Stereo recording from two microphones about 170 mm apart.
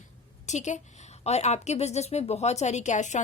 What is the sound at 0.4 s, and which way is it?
A woman's voice, 45° left (ahead or behind).